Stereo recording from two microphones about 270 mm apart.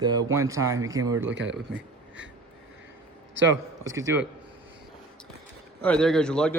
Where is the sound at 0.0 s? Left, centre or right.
Centre.